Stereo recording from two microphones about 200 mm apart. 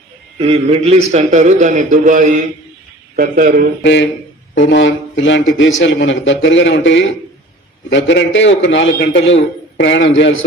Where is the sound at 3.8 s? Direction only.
65° left (ahead or behind).